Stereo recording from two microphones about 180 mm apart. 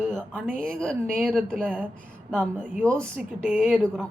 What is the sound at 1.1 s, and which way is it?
Speech, centre (ahead or behind).